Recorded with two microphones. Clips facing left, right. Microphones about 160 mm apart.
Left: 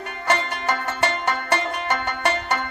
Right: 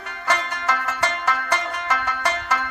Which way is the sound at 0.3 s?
25° left (ahead or behind).